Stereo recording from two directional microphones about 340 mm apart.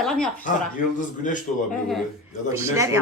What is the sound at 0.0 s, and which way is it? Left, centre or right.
Speech, centre.